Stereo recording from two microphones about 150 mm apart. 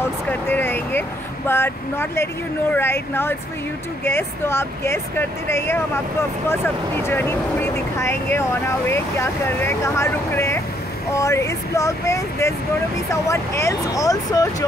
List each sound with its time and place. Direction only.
0.0 s speech: 15° left (ahead or behind)